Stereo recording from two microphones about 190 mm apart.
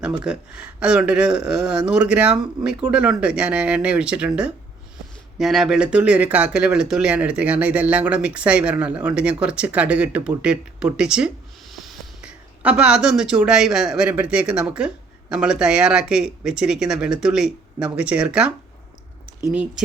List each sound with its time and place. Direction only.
0.0 s speech: 5° right (ahead or behind)
5.4 s speech: centre (ahead or behind)